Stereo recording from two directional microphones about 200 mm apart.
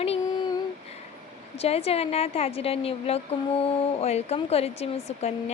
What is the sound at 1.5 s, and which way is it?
A woman's voice, 30° left (ahead or behind).